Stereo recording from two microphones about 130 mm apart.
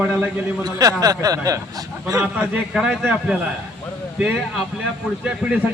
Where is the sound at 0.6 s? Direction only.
25° right (ahead or behind).